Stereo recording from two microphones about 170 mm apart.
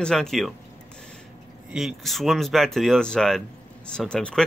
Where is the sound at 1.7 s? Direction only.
Centre (ahead or behind).